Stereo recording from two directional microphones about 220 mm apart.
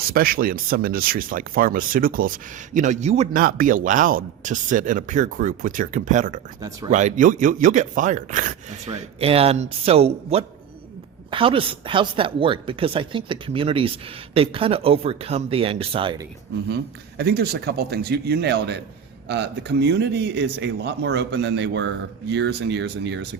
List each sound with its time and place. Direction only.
0.1 s speech: 40° right (ahead or behind); by 16.2 s 25° right (ahead or behind)
16.6 s speech: 50° right (ahead or behind)